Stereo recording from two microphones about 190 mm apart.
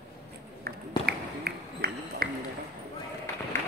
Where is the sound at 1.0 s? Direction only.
55° right (ahead or behind).